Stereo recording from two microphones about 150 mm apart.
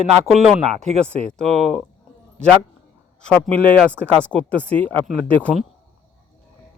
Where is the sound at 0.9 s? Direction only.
45° right (ahead or behind).